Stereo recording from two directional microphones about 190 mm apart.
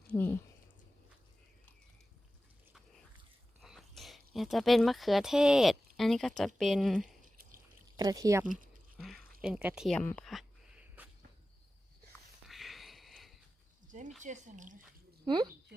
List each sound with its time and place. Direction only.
0.1 s speech: 10° left (ahead or behind)
3.6 s a sound: centre (ahead or behind)
4.4 s speech: centre (ahead or behind)
7.9 s speech: 20° right (ahead or behind)
8.5 s a sound: centre (ahead or behind)
11.0 s insect: 10° right (ahead or behind)
12.5 s a sound: centre (ahead or behind)
14.2 s speech: 40° right (ahead or behind)
15.2 s speech: 25° right (ahead or behind)